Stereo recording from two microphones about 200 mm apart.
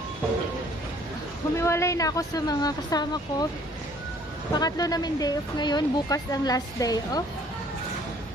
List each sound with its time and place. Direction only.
1.6 s speech: 15° left (ahead or behind)
4.6 s speech: 20° left (ahead or behind)